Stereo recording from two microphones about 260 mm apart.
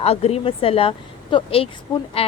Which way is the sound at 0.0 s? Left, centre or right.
Left.